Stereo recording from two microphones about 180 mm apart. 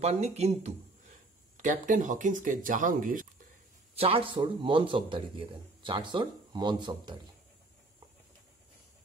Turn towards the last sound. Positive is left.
turn(degrees=-25)  # may be behind; listen again after turning